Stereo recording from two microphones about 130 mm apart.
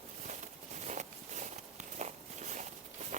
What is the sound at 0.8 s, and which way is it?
Walk, 65° right (ahead or behind).